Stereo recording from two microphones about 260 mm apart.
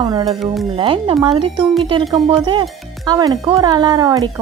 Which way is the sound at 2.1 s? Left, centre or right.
Centre.